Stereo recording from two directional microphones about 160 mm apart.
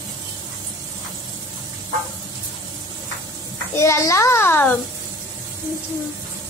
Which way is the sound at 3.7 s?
15° left (ahead or behind).